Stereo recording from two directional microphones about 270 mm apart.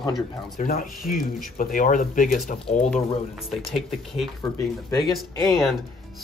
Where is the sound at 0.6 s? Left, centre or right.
Left.